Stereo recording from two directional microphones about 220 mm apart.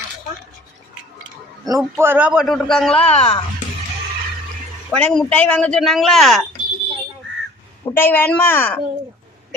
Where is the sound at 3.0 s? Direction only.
25° left (ahead or behind).